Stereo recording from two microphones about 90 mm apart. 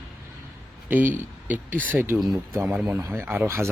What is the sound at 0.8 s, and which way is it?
A man's voice, 20° right (ahead or behind).